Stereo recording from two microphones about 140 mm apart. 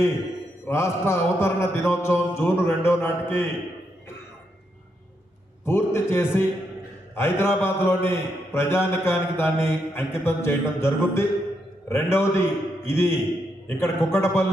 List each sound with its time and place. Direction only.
0.7 s a man's voice: 20° left (ahead or behind)
5.6 s a man's voice: 15° left (ahead or behind)